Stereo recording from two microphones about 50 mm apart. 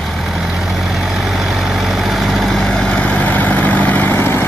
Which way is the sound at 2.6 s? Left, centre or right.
Centre.